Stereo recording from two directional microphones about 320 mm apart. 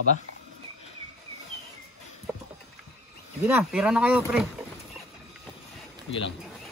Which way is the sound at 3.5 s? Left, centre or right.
Centre.